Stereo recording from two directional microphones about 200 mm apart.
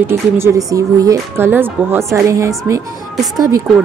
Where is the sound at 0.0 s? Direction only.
10° right (ahead or behind).